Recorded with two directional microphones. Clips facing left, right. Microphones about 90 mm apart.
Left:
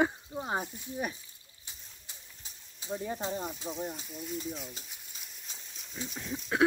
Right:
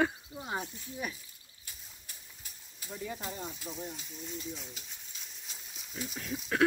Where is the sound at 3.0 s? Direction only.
35° left (ahead or behind).